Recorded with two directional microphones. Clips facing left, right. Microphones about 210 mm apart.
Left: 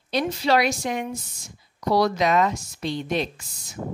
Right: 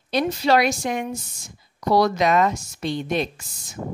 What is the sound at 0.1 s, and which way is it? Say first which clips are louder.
A woman's voice: right 2 dB; 50° right (ahead or behind).